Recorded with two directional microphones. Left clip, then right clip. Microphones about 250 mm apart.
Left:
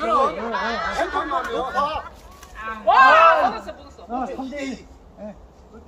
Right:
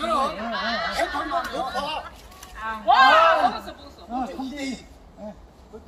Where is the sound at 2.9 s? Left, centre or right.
Left.